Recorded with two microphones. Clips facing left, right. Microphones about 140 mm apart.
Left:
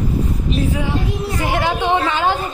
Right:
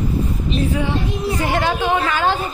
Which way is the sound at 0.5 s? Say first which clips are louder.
Right 1 dB; 5° left (ahead or behind).